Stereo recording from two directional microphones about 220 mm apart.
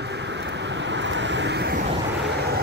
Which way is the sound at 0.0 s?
50° right (ahead or behind).